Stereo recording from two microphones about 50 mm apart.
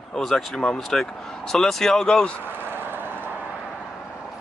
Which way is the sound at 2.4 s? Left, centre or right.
Right.